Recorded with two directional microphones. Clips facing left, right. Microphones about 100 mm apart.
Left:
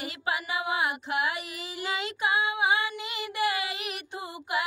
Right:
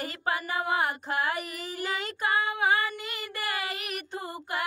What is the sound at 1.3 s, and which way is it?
Child singing, 45° right (ahead or behind).